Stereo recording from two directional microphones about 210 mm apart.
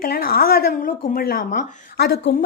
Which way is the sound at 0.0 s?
45° left (ahead or behind).